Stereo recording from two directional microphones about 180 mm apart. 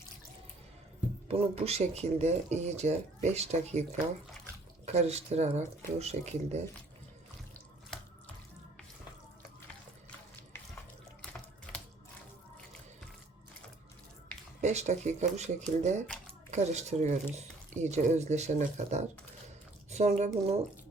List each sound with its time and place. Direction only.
1.3 s speech: 35° right (ahead or behind)
4.9 s speech: 35° right (ahead or behind)
11.2 s water tap: 5° left (ahead or behind)
14.6 s speech: 40° right (ahead or behind)
16.0 s a sound: 5° left (ahead or behind)
16.5 s speech: 40° right (ahead or behind)